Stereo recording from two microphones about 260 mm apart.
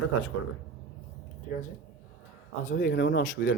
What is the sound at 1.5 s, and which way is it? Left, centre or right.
Speech, left.